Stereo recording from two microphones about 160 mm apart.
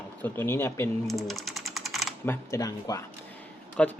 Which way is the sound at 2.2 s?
15° left (ahead or behind).